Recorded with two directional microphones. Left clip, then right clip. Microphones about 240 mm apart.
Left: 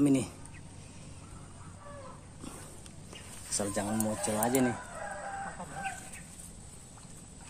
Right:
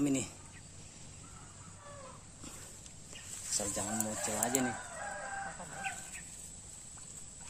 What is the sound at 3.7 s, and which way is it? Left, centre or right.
Speech, left.